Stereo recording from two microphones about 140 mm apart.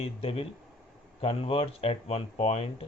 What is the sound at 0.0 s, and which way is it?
Speech, 45° left (ahead or behind).